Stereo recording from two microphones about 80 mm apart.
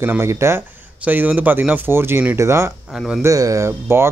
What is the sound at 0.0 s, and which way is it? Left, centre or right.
Speech, right.